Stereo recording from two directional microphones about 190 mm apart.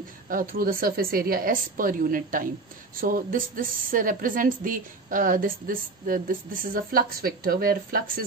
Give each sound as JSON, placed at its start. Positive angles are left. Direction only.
{"t": 0.3, "sound": "a woman's voice", "side_deg": -50}